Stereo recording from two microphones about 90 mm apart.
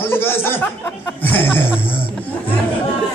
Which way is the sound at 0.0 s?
25° left (ahead or behind).